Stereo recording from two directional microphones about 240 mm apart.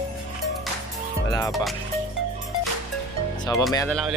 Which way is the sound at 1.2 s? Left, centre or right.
Centre.